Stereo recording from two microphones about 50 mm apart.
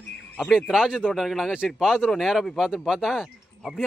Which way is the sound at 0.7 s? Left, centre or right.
Centre.